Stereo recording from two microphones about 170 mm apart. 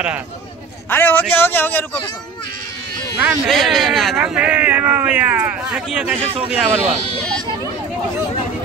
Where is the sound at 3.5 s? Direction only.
Centre (ahead or behind).